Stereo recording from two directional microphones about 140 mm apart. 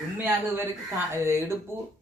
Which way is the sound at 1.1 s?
20° right (ahead or behind).